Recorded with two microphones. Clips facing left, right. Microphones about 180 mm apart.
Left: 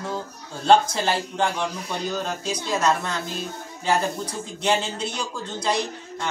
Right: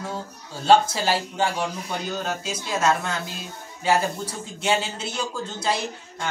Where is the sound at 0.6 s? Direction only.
5° right (ahead or behind).